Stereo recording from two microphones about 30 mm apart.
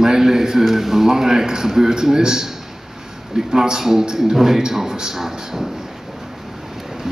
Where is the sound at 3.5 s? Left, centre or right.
Centre.